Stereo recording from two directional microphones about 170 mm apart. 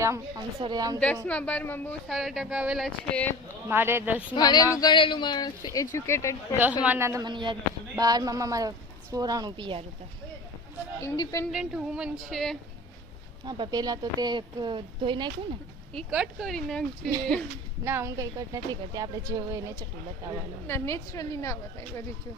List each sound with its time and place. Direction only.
0.0 s a woman's voice: 15° right (ahead or behind)
0.9 s a woman's voice: 10° left (ahead or behind)
2.0 s speech: centre (ahead or behind)
3.7 s speech: 15° right (ahead or behind)
4.4 s speech: 25° left (ahead or behind)
6.8 s a woman's voice: 15° right (ahead or behind)
11.0 s speech: 20° left (ahead or behind)
11.5 s speech: 5° right (ahead or behind)
13.4 s a woman's voice: 25° right (ahead or behind)
16.0 s speech: 5° right (ahead or behind)
17.8 s a woman's voice: 15° right (ahead or behind)
20.7 s a woman's voice: 15° left (ahead or behind)